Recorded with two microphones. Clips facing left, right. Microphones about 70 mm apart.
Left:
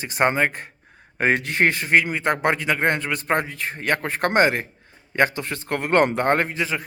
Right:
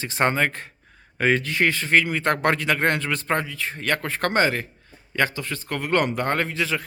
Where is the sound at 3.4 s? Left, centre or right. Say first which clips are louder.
Left 1 dB; left.